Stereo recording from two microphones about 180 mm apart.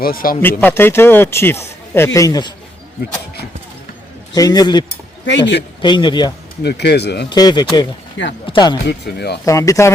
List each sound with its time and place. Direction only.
0.0 s speech: 55° left (ahead or behind)
0.6 s a man's voice: 10° left (ahead or behind)
4.4 s speech: 20° left (ahead or behind)
5.2 s speech: 75° left (ahead or behind)
5.8 s speech: 25° left (ahead or behind)
6.6 s speech: 65° left (ahead or behind)
7.3 s speech: 25° left (ahead or behind)
8.9 s speech: 65° left (ahead or behind)
9.5 s a man's voice: 15° left (ahead or behind)